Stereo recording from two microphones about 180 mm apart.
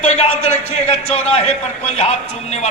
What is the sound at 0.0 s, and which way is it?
A man's voice, 35° left (ahead or behind).